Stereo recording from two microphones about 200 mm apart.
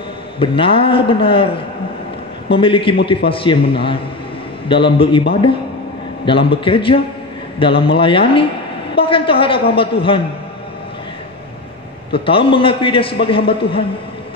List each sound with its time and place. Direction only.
0.4 s a man's voice: 25° left (ahead or behind)
4.6 s a man's voice: 25° left (ahead or behind)
12.1 s a man's voice: 25° left (ahead or behind)